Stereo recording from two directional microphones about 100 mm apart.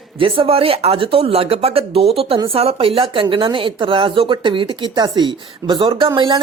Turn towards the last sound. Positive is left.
turn(degrees=-60)  # may be behind; listen again after turning